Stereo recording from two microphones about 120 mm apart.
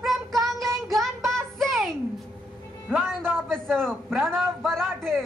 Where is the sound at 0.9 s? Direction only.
Centre (ahead or behind).